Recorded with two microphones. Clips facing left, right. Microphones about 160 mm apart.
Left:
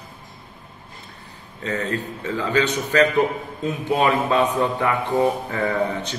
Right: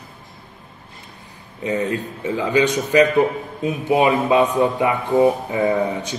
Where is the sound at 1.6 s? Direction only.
15° right (ahead or behind).